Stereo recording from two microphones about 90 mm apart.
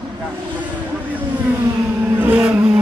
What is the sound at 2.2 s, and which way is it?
Vehicle, 15° right (ahead or behind).